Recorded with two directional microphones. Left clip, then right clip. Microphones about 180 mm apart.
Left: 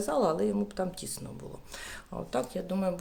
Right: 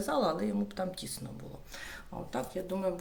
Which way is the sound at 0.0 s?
30° left (ahead or behind).